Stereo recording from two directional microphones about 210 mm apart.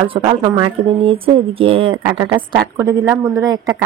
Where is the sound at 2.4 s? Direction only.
10° right (ahead or behind).